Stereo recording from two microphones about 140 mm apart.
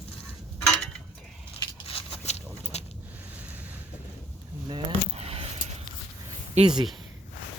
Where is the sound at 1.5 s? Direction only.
40° left (ahead or behind).